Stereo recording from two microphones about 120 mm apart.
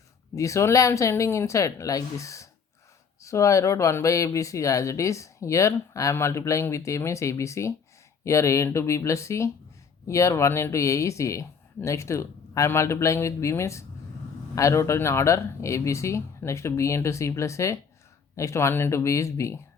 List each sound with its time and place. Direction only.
0.3 s speech: 25° left (ahead or behind)